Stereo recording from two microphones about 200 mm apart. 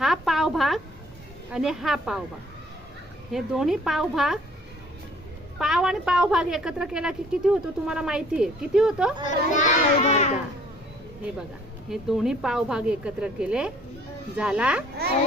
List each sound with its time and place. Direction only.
0.0 s a sound: centre (ahead or behind)
1.5 s a woman's voice: 5° right (ahead or behind)
3.3 s a woman's voice: centre (ahead or behind)
5.5 s a woman's voice: 5° right (ahead or behind)
9.5 s a child's voice: 40° left (ahead or behind)
11.9 s a woman's voice: centre (ahead or behind)